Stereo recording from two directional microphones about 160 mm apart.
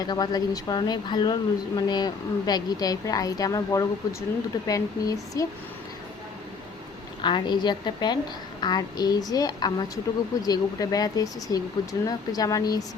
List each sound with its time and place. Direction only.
0.0 s speech: 25° left (ahead or behind)
7.2 s speech: 30° left (ahead or behind)